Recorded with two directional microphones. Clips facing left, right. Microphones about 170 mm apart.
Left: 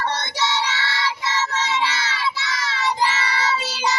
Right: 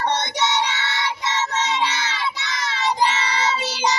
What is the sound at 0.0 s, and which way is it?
Child singing, 20° right (ahead or behind).